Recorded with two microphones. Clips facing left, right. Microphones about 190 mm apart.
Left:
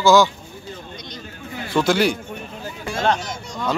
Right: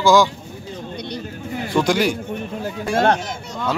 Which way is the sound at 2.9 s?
55° right (ahead or behind).